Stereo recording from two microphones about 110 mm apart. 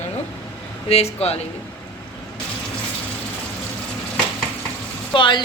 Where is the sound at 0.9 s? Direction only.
70° left (ahead or behind).